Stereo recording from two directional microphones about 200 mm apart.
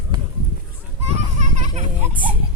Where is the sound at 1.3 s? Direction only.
35° right (ahead or behind).